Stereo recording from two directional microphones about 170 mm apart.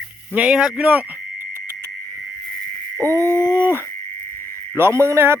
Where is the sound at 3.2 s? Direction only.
20° left (ahead or behind).